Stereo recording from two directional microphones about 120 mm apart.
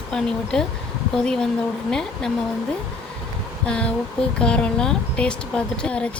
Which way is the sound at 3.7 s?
10° left (ahead or behind).